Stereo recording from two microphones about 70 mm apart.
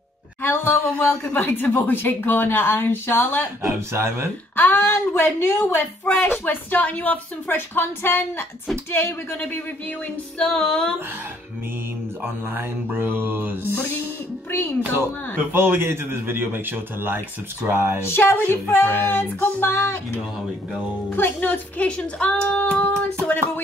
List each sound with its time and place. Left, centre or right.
0.4 s a sound: left
1.0 s speech: left
3.6 s speech: right
4.6 s speech: left
10.4 s speech: centre
12.2 s a man's voice: right
15.3 s a man's voice: right
18.0 s speech: left
21.2 s speech: left
23.2 s a sound: left